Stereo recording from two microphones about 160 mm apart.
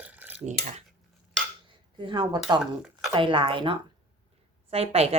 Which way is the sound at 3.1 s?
30° right (ahead or behind).